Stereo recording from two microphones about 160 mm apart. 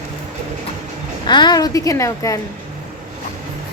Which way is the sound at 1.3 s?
25° left (ahead or behind).